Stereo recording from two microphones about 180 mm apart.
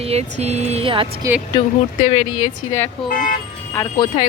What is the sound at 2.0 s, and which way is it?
Speech, 40° left (ahead or behind).